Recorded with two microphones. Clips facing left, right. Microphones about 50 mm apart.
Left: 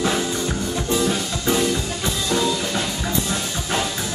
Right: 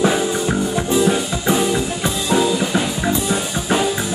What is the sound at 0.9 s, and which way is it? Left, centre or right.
Music, centre.